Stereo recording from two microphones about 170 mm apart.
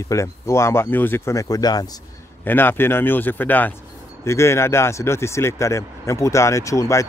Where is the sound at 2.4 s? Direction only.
10° left (ahead or behind).